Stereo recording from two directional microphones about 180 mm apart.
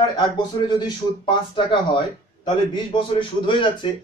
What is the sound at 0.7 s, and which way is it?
A man's voice, 25° left (ahead or behind).